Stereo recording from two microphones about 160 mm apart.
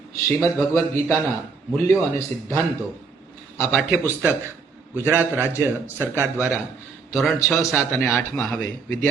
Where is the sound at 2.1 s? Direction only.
20° left (ahead or behind).